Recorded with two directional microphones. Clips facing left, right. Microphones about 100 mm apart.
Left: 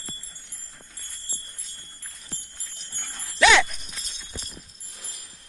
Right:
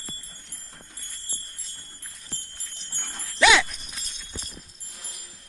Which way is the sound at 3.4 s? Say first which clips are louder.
Left 1 dB; 5° right (ahead or behind).